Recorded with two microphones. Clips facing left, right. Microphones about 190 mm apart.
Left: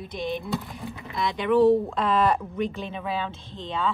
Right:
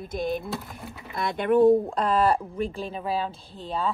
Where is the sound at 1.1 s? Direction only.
55° right (ahead or behind).